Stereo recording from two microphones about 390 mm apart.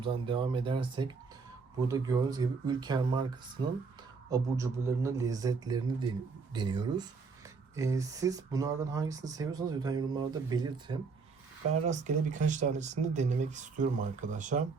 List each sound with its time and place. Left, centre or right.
0.0 s speech: centre